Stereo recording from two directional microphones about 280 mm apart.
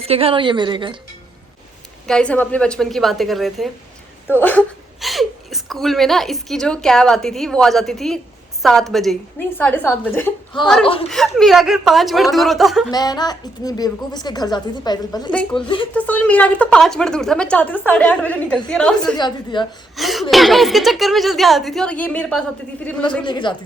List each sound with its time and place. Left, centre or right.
0.0 s a woman's voice: right
2.0 s a woman's voice: centre
11.1 s speech: centre
12.9 s a woman's voice: centre
16.0 s speech: centre
19.1 s a woman's voice: centre
20.0 s speech: centre
23.2 s a woman's voice: centre